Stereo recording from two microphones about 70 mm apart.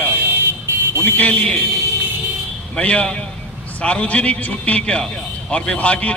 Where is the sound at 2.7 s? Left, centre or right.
Centre.